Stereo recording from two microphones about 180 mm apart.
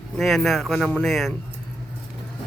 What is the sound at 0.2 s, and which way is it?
Speech, centre (ahead or behind).